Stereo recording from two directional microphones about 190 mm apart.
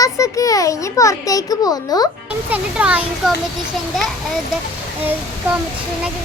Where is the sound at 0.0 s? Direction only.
20° left (ahead or behind).